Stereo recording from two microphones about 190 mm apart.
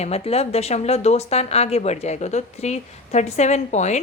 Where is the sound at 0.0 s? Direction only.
35° left (ahead or behind).